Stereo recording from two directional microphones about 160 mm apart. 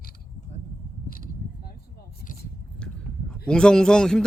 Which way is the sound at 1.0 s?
65° left (ahead or behind).